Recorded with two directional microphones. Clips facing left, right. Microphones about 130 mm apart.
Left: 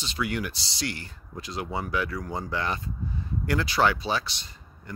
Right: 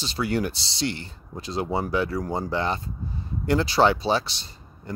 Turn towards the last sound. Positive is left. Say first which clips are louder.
# right 5 dB
turn(degrees=-30)  # may be behind; listen again after turning